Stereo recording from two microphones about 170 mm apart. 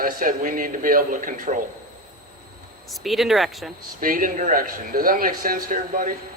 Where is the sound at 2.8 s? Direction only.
Centre (ahead or behind).